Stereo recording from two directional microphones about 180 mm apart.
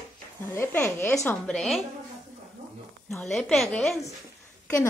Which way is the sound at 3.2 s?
Centre (ahead or behind).